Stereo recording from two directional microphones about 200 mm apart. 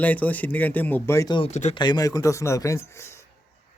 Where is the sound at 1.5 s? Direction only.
35° left (ahead or behind).